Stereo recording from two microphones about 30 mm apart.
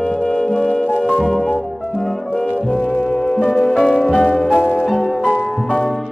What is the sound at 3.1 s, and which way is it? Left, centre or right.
Music, centre.